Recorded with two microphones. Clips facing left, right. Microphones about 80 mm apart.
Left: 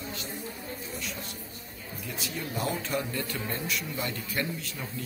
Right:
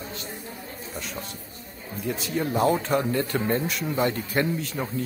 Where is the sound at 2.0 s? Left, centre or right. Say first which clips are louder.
Right 10 dB; right.